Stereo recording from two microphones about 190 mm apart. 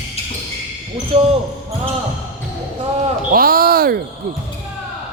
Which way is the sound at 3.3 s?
50° right (ahead or behind).